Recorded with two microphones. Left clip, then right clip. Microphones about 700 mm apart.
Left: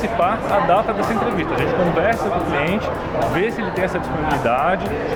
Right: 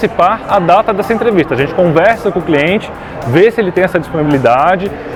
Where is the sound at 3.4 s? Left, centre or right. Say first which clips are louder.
Right 11 dB; right.